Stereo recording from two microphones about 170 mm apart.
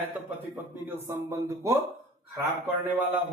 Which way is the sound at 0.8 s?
15° right (ahead or behind).